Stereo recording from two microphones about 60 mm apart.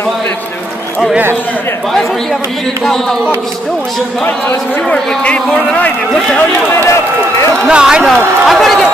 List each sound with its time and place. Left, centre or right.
4.8 s a man's voice: centre
6.8 s a man's voice: left
7.6 s speech: centre
8.1 s speech: centre